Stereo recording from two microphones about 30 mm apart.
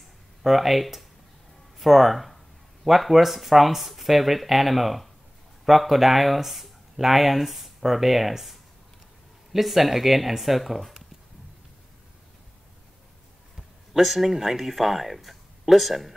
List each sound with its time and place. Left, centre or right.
0.4 s speech: centre
13.6 s speech: centre